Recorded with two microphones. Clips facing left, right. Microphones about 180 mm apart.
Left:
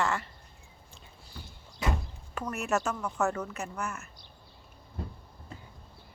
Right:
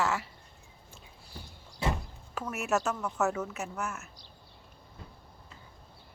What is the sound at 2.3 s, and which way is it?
Speech, 5° right (ahead or behind).